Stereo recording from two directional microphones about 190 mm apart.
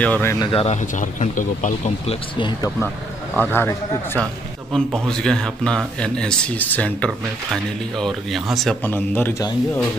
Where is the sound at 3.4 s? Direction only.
10° left (ahead or behind).